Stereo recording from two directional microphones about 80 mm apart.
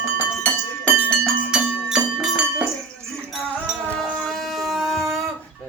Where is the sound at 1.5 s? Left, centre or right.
Centre.